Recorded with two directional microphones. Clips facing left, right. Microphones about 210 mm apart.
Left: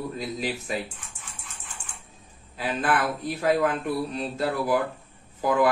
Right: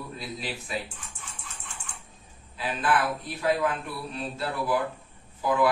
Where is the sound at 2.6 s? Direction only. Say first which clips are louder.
Left 1 dB; 45° left (ahead or behind).